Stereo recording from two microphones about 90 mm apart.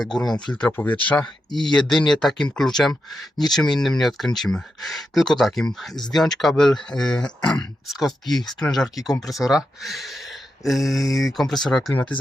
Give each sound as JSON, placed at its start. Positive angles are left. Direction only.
{"t": 0.0, "sound": "speech", "side_deg": 5}
{"t": 0.7, "sound": "speech", "side_deg": 20}
{"t": 1.0, "sound": "speech", "side_deg": 10}
{"t": 7.9, "sound": "speech", "side_deg": 0}
{"t": 11.9, "sound": "speech", "side_deg": 15}